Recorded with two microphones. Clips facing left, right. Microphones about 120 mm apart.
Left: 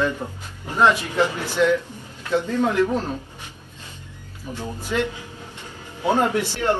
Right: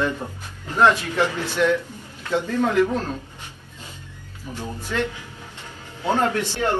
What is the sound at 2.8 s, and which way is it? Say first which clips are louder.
Speech: left 1 dB; 15° left (ahead or behind).